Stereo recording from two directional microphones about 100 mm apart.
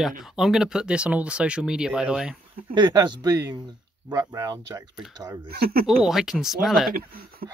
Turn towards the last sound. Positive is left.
turn(degrees=0)  # may be behind; listen again after turning